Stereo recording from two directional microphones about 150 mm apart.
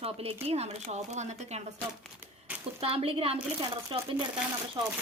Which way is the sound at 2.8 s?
40° right (ahead or behind).